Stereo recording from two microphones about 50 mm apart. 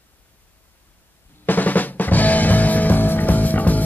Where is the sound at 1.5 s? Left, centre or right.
Left.